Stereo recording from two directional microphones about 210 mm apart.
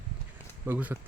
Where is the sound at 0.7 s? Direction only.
10° right (ahead or behind).